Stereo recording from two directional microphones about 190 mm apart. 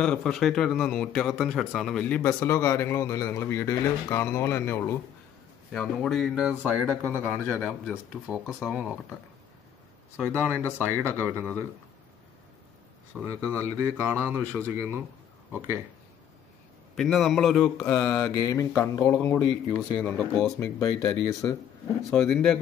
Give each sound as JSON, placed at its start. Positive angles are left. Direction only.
{"t": 0.0, "sound": "speech", "side_deg": 5}
{"t": 5.7, "sound": "speech", "side_deg": 0}
{"t": 7.5, "sound": "speech", "side_deg": 10}
{"t": 7.9, "sound": "speech", "side_deg": -5}
{"t": 10.1, "sound": "speech", "side_deg": -5}
{"t": 13.2, "sound": "speech", "side_deg": -15}
{"t": 16.9, "sound": "speech", "side_deg": 0}
{"t": 17.7, "sound": "speech", "side_deg": 15}
{"t": 22.1, "sound": "speech", "side_deg": 0}